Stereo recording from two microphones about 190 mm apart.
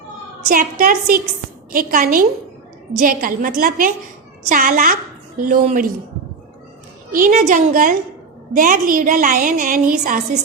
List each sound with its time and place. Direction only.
0.4 s a woman's voice: 50° right (ahead or behind)
7.1 s a woman's voice: 45° right (ahead or behind)